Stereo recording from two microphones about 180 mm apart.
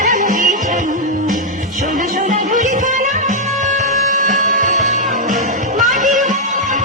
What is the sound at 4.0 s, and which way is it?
Music, 45° right (ahead or behind).